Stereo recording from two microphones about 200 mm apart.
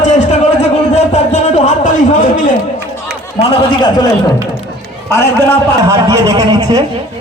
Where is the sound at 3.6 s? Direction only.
20° left (ahead or behind).